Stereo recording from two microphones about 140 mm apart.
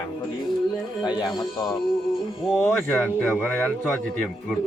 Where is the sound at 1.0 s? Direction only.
30° left (ahead or behind).